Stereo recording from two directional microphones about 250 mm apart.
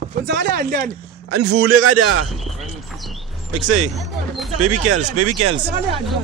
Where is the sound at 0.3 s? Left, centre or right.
Right.